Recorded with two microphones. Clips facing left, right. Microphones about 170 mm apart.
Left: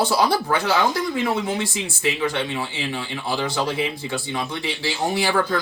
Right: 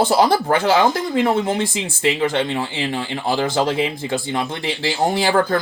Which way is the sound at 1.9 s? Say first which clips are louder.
Right 6 dB; 90° right.